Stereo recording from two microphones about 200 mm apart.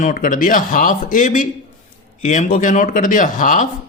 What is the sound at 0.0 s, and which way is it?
Speech, 40° left (ahead or behind).